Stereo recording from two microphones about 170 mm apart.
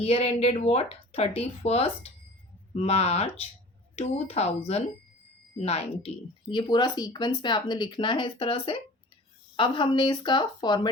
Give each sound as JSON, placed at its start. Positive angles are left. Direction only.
{"t": 0.0, "sound": "a woman's voice", "side_deg": 35}
{"t": 6.5, "sound": "speech", "side_deg": 25}